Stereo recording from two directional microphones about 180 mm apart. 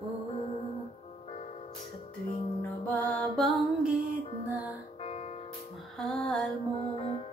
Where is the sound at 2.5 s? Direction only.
10° left (ahead or behind).